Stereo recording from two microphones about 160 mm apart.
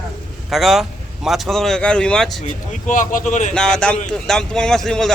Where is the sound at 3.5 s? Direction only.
5° left (ahead or behind).